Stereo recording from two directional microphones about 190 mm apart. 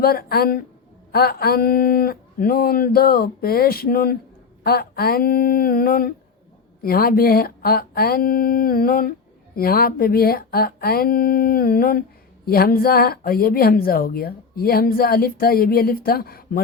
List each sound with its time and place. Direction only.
0.0 s speech: 55° left (ahead or behind)